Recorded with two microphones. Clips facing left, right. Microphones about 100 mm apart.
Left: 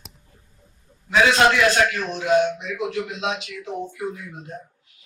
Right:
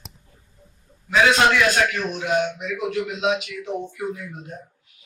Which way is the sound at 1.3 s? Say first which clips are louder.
Left 1 dB; 35° left (ahead or behind).